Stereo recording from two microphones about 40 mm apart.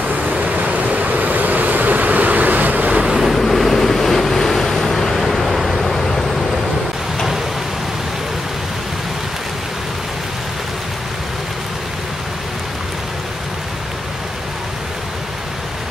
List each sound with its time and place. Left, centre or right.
0.1 s waves: right
3.0 s waves: centre
3.3 s waves: centre